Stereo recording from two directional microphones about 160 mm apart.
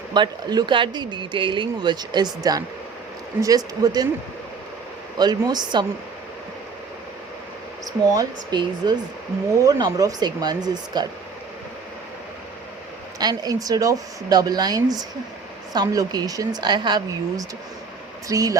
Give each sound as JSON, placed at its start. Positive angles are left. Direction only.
{"t": 0.1, "sound": "speech", "side_deg": -30}
{"t": 5.1, "sound": "speech", "side_deg": -25}
{"t": 8.1, "sound": "speech", "side_deg": -25}
{"t": 13.1, "sound": "speech", "side_deg": -25}